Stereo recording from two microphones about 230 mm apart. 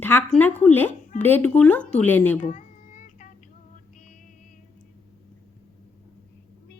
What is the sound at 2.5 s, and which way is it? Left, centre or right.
Child singing, left.